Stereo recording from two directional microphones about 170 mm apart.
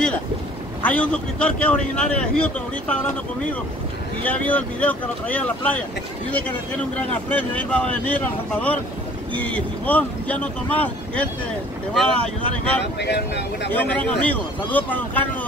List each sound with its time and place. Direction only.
0.8 s speech: 10° left (ahead or behind)
4.2 s speech: 10° left (ahead or behind)
7.0 s speech: 10° left (ahead or behind)
13.0 s speech: 80° left
13.7 s speech: 10° left (ahead or behind)